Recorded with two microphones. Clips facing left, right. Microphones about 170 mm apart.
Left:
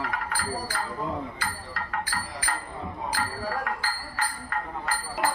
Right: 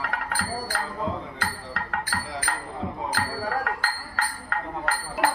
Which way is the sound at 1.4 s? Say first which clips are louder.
Right 2 dB; 70° right (ahead or behind).